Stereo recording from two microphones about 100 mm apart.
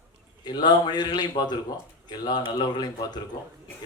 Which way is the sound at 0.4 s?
45° left (ahead or behind).